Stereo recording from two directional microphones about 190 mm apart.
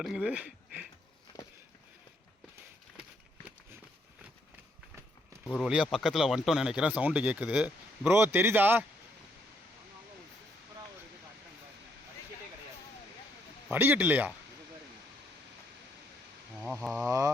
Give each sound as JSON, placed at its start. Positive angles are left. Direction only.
{"t": 0.0, "sound": "speech", "side_deg": -5}
{"t": 3.0, "sound": "a sound", "side_deg": -5}
{"t": 5.5, "sound": "speech", "side_deg": 0}
{"t": 13.7, "sound": "speech", "side_deg": -10}
{"t": 16.9, "sound": "speech", "side_deg": -15}